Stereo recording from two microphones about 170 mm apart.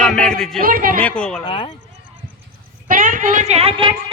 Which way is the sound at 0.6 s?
55° right (ahead or behind).